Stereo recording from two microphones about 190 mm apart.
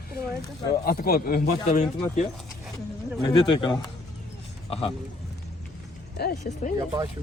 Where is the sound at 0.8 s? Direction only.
55° left (ahead or behind).